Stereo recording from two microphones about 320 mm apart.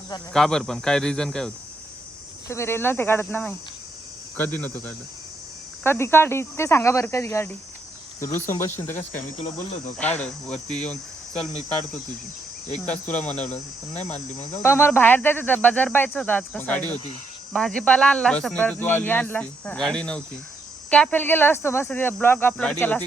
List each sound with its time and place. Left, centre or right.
0.3 s speech: centre
5.8 s speech: centre
12.8 s speech: centre
13.5 s cricket: left
14.5 s speech: centre